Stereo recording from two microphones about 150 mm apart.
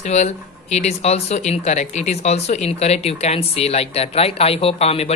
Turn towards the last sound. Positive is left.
turn(degrees=45)  # may be behind; listen again after turning